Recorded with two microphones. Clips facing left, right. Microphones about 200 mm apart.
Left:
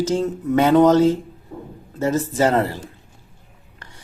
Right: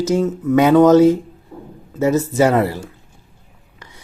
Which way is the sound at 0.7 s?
15° left (ahead or behind).